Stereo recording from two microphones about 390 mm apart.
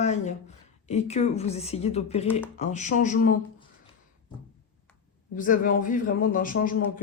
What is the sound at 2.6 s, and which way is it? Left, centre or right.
Speech, centre.